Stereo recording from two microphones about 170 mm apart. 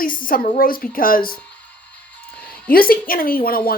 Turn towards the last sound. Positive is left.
turn(degrees=60)  # may be behind; listen again after turning